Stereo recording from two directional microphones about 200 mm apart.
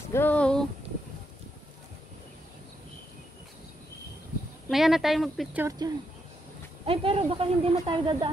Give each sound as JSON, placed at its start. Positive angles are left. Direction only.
{"t": 0.1, "sound": "a sound", "side_deg": 10}
{"t": 4.6, "sound": "speech", "side_deg": 0}
{"t": 6.9, "sound": "speech", "side_deg": -25}